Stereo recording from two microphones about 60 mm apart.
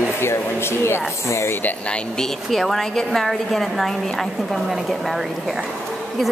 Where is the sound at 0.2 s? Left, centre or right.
Left.